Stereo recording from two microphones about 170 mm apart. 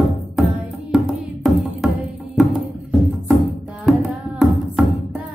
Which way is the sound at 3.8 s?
Centre (ahead or behind).